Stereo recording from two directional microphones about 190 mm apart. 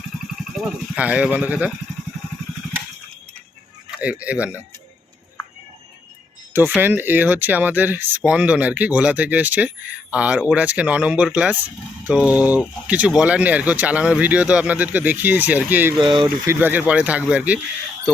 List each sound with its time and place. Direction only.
0.5 s speech: 5° right (ahead or behind)
3.9 s speech: 5° right (ahead or behind)
6.5 s speech: 10° right (ahead or behind)
16.0 s speech: 25° right (ahead or behind)
16.6 s speech: 10° right (ahead or behind)